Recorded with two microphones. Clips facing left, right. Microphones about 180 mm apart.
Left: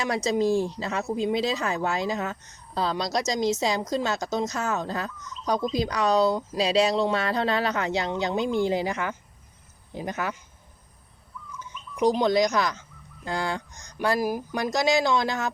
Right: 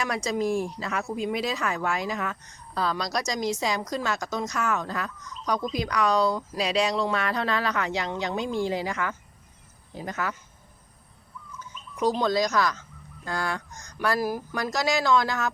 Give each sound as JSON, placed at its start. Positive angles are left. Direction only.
{"t": 0.0, "sound": "a woman's voice", "side_deg": 25}
{"t": 11.9, "sound": "a woman's voice", "side_deg": 15}